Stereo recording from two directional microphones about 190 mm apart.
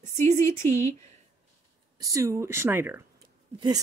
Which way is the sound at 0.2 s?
15° left (ahead or behind).